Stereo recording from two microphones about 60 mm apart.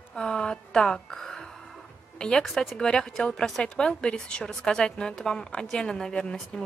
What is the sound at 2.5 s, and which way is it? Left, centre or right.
Speech, centre.